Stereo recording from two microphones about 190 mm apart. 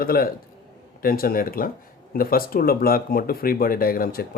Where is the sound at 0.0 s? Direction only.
50° left (ahead or behind).